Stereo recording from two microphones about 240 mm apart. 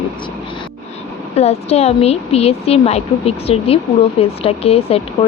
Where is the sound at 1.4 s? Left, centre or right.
Left.